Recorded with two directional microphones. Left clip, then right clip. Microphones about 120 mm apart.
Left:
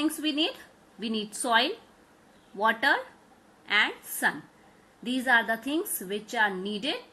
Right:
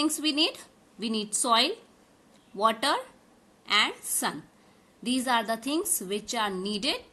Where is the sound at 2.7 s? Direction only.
30° right (ahead or behind).